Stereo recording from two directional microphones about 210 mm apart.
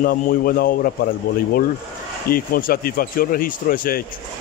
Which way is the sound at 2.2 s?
45° left (ahead or behind).